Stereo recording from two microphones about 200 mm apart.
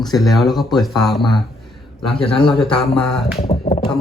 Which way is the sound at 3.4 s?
30° left (ahead or behind).